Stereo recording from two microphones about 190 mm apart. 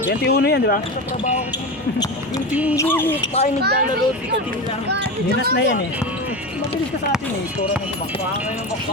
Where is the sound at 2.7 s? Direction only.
10° left (ahead or behind).